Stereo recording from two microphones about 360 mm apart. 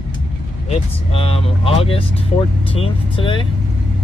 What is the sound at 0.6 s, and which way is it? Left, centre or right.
Speech, centre.